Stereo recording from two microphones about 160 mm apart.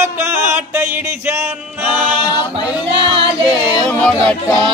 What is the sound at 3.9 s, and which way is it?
Speech, 5° left (ahead or behind).